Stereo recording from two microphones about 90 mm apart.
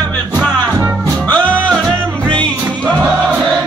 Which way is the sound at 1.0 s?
20° left (ahead or behind).